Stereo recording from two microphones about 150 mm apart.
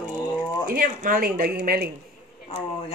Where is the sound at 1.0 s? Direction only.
70° right (ahead or behind); by 1.9 s 90° right.